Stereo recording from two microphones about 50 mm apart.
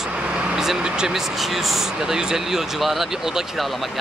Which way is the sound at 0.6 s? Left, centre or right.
Centre.